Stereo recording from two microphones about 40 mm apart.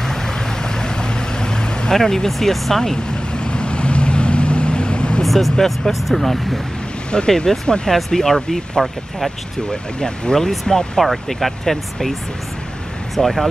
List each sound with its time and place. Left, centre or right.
0.0 s vehicle: centre
2.0 s speech: centre
3.3 s vehicle: left
5.2 s speech: centre
7.1 s speech: centre
9.7 s speech: centre
11.0 s speech: centre